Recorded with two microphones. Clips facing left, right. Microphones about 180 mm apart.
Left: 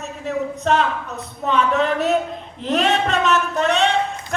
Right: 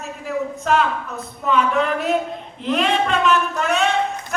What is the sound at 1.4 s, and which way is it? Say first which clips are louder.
Speech: even; 35° left (ahead or behind).